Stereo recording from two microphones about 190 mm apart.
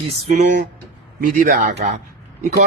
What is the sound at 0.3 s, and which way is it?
A man's voice, 40° right (ahead or behind).